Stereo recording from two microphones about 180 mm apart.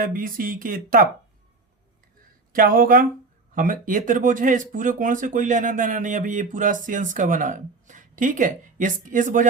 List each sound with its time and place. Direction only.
0.0 s speech: 50° right (ahead or behind)
2.5 s speech: 50° right (ahead or behind)